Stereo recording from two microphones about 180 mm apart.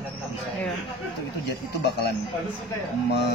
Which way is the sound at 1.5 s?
65° left (ahead or behind).